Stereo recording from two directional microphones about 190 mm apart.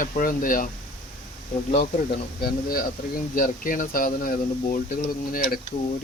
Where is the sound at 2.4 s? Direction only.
50° left (ahead or behind).